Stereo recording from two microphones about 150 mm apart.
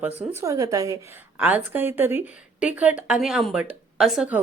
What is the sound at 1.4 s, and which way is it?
A woman's voice, 10° right (ahead or behind).